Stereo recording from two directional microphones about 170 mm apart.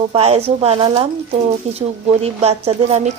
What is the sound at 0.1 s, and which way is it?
Speech, 35° right (ahead or behind).